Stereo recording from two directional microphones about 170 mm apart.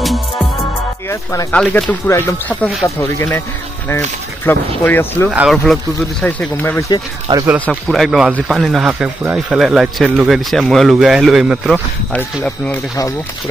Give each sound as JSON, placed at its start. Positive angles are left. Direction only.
{"t": 1.5, "sound": "speech", "side_deg": 5}
{"t": 4.5, "sound": "speech", "side_deg": 10}
{"t": 5.3, "sound": "speech", "side_deg": -5}
{"t": 6.2, "sound": "speech", "side_deg": 10}
{"t": 7.3, "sound": "speech", "side_deg": -30}
{"t": 7.6, "sound": "speech", "side_deg": 0}